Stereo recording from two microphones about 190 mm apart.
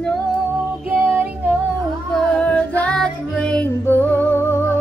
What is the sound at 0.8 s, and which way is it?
Child singing, 10° right (ahead or behind).